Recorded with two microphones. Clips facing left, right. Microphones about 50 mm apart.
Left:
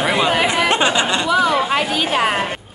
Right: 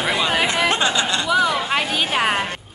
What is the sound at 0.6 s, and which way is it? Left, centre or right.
Speech, centre.